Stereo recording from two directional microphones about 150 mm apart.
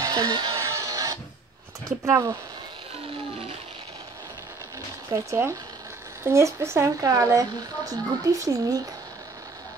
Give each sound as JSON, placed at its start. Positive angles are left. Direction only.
{"t": 0.0, "sound": "music", "side_deg": -30}
{"t": 1.9, "sound": "speech", "side_deg": -20}
{"t": 5.1, "sound": "speech", "side_deg": -20}